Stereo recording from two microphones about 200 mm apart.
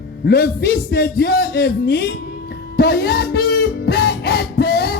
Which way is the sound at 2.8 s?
55° left (ahead or behind).